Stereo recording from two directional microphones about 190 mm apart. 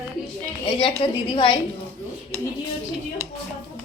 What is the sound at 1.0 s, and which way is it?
Speech, 25° left (ahead or behind).